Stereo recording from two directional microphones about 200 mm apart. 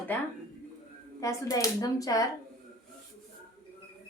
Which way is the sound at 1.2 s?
15° left (ahead or behind).